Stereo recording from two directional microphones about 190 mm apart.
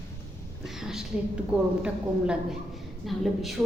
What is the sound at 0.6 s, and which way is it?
A woman's voice, centre (ahead or behind).